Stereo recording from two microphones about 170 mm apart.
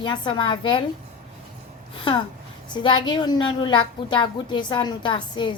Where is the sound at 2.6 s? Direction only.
25° left (ahead or behind).